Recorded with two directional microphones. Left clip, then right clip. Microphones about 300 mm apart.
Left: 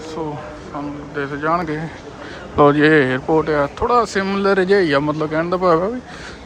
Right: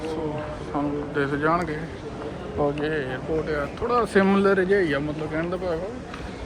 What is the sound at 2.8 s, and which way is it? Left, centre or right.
Speech, centre.